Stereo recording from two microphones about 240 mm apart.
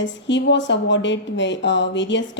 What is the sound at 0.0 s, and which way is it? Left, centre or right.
A woman's voice, left.